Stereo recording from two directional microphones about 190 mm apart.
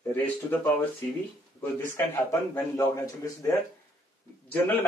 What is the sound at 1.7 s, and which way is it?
Speech, 10° left (ahead or behind).